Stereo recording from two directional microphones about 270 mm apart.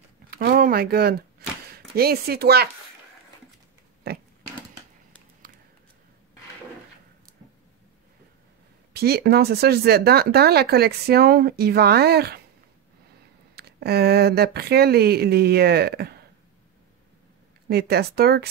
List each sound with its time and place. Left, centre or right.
0.3 s a sound: right
2.0 s speech: right
8.9 s speech: right
13.6 s speech: right
17.6 s speech: right